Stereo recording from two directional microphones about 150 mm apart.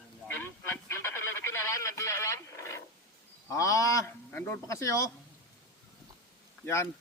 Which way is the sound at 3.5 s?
20° left (ahead or behind).